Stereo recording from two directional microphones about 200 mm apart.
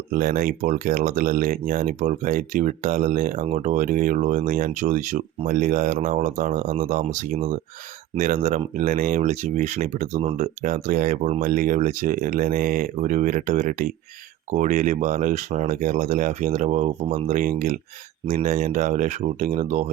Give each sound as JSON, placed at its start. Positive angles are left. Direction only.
{"t": 0.1, "sound": "speech", "side_deg": -45}